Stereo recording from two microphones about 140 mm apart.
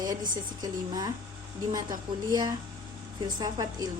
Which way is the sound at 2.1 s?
35° right (ahead or behind).